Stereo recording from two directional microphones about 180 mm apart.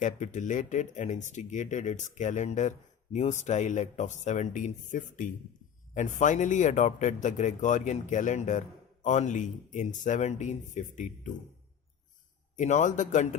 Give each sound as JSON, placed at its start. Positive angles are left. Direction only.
{"t": 0.0, "sound": "speech", "side_deg": 45}
{"t": 12.5, "sound": "speech", "side_deg": 45}